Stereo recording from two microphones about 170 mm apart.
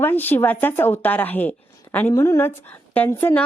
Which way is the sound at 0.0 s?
10° left (ahead or behind).